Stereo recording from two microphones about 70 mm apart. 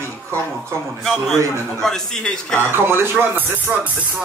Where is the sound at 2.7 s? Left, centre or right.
Right.